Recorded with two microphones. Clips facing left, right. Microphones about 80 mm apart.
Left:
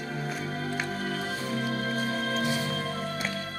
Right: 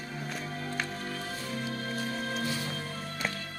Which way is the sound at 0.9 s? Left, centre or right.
Left.